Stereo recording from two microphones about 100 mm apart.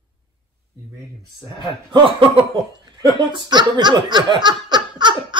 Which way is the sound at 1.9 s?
60° right (ahead or behind).